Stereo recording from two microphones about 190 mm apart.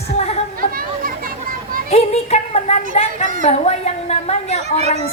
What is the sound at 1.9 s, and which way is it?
A woman's voice, 35° left (ahead or behind).